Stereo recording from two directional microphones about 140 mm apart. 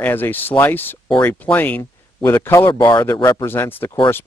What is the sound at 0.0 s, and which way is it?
Speech, 15° left (ahead or behind).